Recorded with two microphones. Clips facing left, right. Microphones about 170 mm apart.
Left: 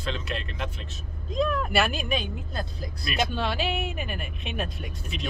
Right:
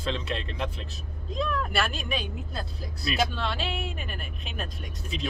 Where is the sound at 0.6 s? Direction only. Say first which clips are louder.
Right 2 dB; 35° right (ahead or behind).